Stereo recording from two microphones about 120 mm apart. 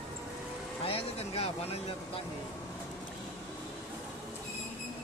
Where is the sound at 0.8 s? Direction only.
55° left (ahead or behind).